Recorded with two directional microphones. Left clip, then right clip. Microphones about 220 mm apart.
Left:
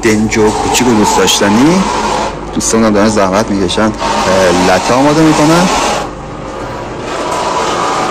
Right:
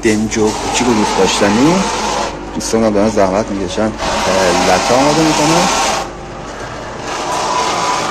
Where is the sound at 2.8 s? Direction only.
5° right (ahead or behind).